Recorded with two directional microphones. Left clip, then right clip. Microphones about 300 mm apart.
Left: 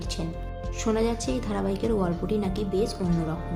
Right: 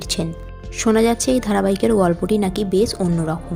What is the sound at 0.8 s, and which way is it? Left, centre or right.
A woman's voice, right.